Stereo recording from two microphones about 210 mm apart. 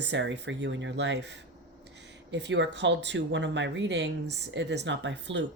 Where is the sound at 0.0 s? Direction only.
60° right (ahead or behind).